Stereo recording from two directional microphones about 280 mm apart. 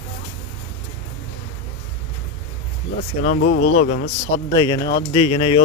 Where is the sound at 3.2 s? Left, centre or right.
Left.